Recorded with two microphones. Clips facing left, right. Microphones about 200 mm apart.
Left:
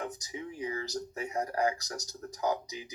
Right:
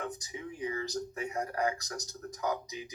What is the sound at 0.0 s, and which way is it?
Speech, 30° left (ahead or behind).